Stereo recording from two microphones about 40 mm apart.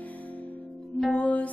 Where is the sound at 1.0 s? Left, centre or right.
Left.